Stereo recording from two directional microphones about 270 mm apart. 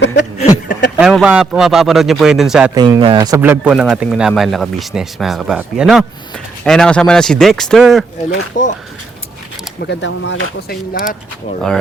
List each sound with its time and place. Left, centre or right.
0.3 s a sound: left
0.9 s speech: centre
2.7 s speech: centre
8.6 s speech: left
9.8 s speech: left
10.9 s speech: left